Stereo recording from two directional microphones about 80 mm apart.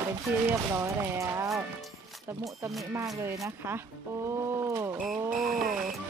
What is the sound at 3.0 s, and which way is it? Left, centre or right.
Speech, right.